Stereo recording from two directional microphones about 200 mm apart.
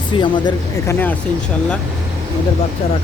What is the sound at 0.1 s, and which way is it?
Speech, 25° left (ahead or behind).